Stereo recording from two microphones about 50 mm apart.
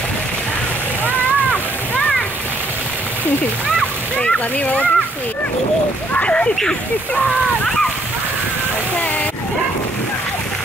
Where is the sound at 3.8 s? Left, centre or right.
Left.